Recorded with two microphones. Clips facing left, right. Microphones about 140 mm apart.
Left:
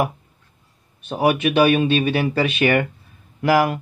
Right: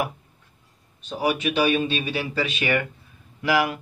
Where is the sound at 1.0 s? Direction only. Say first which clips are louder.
Left 5 dB; 60° left (ahead or behind).